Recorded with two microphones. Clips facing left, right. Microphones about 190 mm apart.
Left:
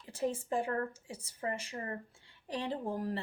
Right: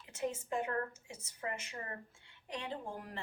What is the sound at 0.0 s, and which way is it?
Speech, 35° left (ahead or behind).